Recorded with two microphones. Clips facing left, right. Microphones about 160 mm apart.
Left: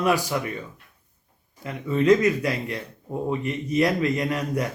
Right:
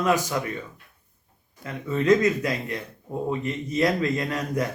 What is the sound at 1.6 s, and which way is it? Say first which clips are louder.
Speech: left 3 dB; 15° left (ahead or behind).